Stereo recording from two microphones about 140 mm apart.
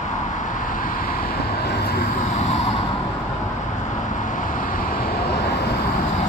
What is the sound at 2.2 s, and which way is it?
Vehicle, 55° left (ahead or behind).